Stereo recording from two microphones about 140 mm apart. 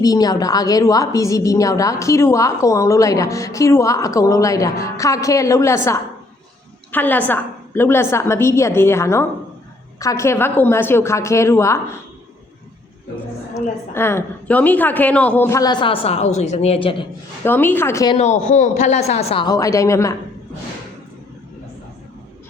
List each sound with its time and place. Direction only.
0.0 s a woman's voice: 25° left (ahead or behind)
13.9 s a woman's voice: 15° left (ahead or behind)
15.4 s a man's voice: 25° left (ahead or behind)
17.4 s a woman's voice: 15° left (ahead or behind)
18.2 s a man's voice: 55° left (ahead or behind)
19.5 s a woman's voice: 25° left (ahead or behind)